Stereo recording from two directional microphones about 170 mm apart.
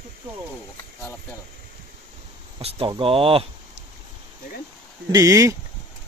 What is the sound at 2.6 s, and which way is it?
Speech, 35° right (ahead or behind).